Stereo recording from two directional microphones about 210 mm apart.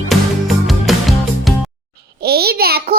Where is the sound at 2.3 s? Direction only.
50° right (ahead or behind).